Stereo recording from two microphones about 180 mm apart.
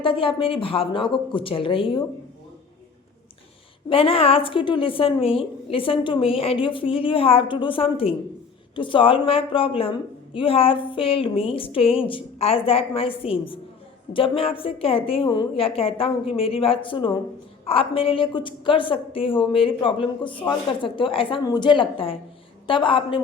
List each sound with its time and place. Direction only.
0.0 s a woman's voice: 30° left (ahead or behind)
3.8 s a woman's voice: 30° left (ahead or behind)